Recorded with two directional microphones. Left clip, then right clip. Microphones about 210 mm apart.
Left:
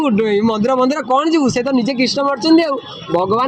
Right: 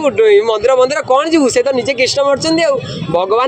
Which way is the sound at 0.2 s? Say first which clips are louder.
Right 7 dB; 60° right (ahead or behind).